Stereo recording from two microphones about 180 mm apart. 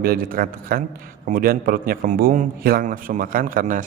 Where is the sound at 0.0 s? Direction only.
55° right (ahead or behind).